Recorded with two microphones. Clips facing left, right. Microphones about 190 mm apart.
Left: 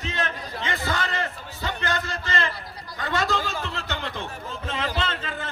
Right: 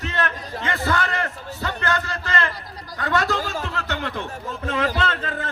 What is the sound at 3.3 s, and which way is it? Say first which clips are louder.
Speech: right 2 dB; 40° right (ahead or behind).